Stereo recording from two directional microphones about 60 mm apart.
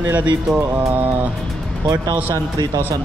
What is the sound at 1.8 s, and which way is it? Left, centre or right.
Speech, right.